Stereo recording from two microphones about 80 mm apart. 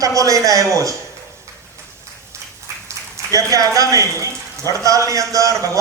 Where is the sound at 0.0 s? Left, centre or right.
Right.